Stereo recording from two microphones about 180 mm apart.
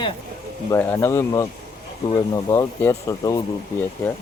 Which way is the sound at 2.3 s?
15° left (ahead or behind).